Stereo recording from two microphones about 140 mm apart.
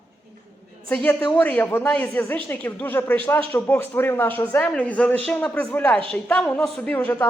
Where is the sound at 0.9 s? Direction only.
15° left (ahead or behind).